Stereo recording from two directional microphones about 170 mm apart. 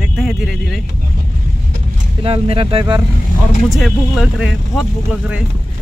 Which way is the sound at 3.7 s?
Centre (ahead or behind).